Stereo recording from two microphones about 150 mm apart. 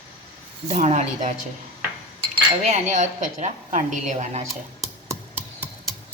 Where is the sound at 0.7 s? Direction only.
50° right (ahead or behind).